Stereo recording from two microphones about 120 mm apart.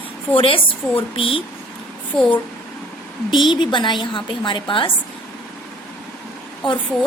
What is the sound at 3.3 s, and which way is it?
A woman's voice, 40° left (ahead or behind).